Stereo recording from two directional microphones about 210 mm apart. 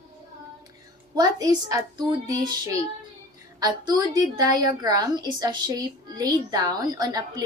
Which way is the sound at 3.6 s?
20° right (ahead or behind).